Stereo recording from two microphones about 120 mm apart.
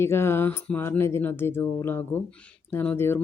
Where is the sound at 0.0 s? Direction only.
20° left (ahead or behind).